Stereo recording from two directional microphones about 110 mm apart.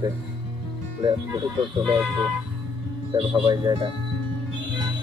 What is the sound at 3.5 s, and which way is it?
Speech, 35° right (ahead or behind).